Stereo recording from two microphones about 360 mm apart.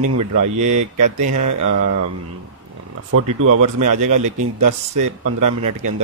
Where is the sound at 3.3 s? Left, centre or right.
Right.